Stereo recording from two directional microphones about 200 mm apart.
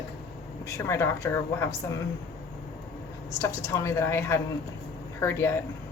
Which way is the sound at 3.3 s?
15° left (ahead or behind).